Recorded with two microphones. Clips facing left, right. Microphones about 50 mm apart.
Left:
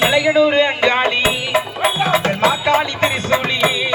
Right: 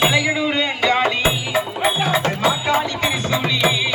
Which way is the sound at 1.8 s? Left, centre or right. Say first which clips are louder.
Left 2 dB; left.